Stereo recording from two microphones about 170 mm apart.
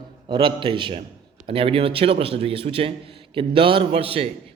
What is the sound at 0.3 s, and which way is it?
A man's voice, 30° right (ahead or behind).